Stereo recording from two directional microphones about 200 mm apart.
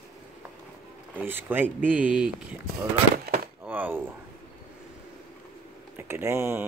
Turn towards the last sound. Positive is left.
turn(degrees=-10)  # may be behind; listen again after turning